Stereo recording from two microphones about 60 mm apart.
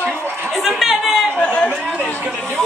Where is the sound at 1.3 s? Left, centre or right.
Centre.